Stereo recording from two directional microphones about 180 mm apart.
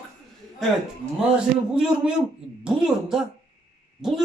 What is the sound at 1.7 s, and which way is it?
Speech, 5° right (ahead or behind).